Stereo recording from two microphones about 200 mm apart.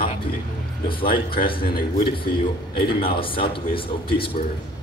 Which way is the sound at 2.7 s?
25° left (ahead or behind).